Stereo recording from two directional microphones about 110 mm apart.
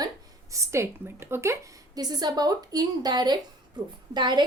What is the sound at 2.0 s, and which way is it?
A woman's voice, 35° right (ahead or behind).